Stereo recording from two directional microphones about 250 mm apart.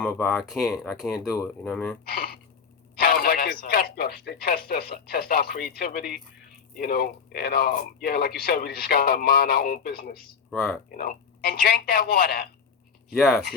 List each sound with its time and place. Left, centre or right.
0.0 s speech: centre
2.0 s speech: left
13.1 s speech: centre